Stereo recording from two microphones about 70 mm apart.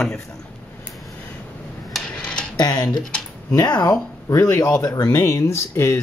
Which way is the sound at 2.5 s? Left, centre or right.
Left.